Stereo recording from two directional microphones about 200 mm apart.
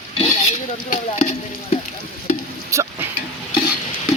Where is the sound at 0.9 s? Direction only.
35° left (ahead or behind).